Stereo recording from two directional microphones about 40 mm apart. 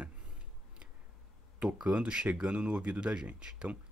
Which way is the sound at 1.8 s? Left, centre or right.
Right.